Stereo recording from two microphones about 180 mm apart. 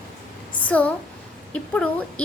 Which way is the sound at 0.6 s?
5° left (ahead or behind).